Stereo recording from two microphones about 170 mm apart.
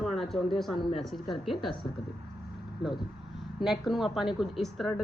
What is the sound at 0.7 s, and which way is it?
Speech, 30° left (ahead or behind).